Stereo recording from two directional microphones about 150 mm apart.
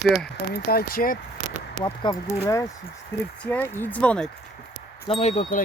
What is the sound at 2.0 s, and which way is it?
Speech, 25° left (ahead or behind).